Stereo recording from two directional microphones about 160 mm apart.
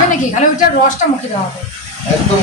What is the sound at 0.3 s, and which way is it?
Speech, 50° left (ahead or behind).